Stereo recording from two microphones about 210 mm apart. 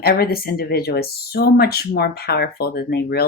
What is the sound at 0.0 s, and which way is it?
Speech, 45° left (ahead or behind).